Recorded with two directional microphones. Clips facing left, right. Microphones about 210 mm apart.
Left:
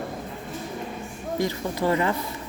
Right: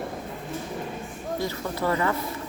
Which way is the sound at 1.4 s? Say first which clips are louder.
Left 4 dB; 15° left (ahead or behind).